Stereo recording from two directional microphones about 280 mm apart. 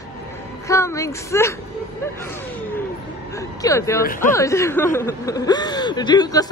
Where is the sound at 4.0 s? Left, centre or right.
Left.